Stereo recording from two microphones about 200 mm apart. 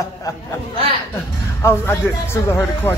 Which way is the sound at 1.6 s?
15° left (ahead or behind).